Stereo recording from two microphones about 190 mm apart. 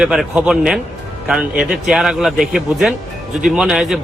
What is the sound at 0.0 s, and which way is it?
A man's voice, 5° right (ahead or behind).